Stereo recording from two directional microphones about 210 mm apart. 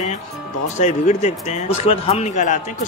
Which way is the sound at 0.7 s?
35° left (ahead or behind).